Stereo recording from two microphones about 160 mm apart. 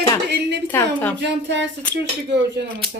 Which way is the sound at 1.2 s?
90° right.